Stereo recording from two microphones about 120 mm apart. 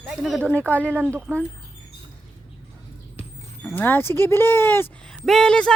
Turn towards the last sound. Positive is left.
turn(degrees=5)  # may be behind; listen again after turning